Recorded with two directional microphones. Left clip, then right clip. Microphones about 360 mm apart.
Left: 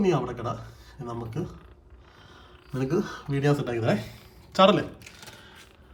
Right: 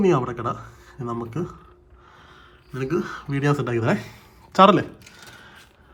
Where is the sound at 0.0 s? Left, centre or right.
Centre.